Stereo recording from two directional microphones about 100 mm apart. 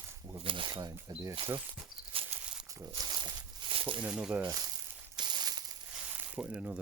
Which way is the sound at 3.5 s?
55° right (ahead or behind).